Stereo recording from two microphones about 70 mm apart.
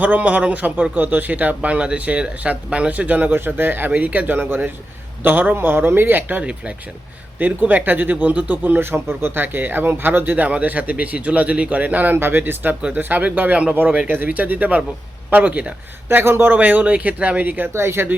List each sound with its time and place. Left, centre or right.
0.0 s speech: right
16.0 s speech: right
17.7 s speech: right